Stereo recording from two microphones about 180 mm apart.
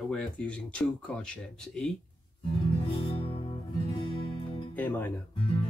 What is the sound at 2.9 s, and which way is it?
Music, 30° left (ahead or behind).